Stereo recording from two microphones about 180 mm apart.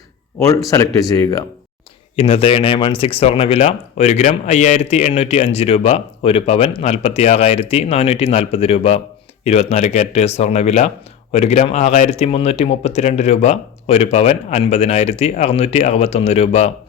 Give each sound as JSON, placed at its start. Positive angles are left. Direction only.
{"t": 0.3, "sound": "speech", "side_deg": 15}
{"t": 2.1, "sound": "speech", "side_deg": 30}